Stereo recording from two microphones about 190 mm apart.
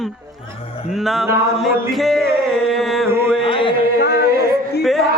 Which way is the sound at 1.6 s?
Centre (ahead or behind).